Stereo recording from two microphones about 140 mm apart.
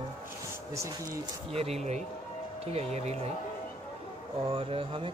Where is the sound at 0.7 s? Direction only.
20° right (ahead or behind).